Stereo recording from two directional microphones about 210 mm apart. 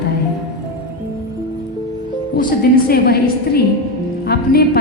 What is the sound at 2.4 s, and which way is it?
A woman's voice, 45° left (ahead or behind).